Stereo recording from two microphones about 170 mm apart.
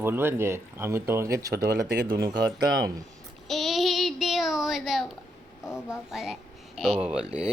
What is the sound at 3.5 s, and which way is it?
Child singing, centre (ahead or behind).